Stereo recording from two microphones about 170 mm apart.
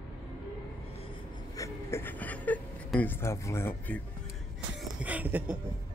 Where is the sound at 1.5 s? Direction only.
15° left (ahead or behind).